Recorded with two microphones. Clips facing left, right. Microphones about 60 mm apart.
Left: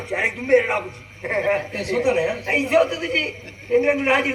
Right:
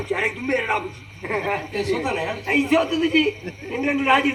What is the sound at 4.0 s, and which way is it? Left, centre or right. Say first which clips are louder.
Speech: right 1 dB; left.